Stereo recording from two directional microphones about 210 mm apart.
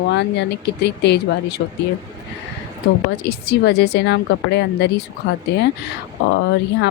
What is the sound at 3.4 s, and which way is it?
A woman's voice, 50° left (ahead or behind).